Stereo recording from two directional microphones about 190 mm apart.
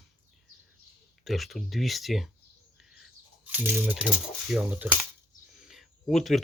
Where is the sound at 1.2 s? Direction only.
Centre (ahead or behind).